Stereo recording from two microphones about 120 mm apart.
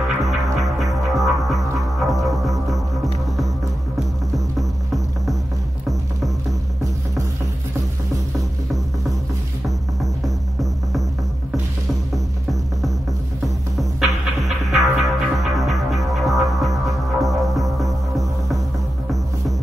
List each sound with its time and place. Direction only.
0.2 s music: centre (ahead or behind)
4.6 s music: centre (ahead or behind)
10.2 s throbbing: centre (ahead or behind)
13.7 s music: centre (ahead or behind)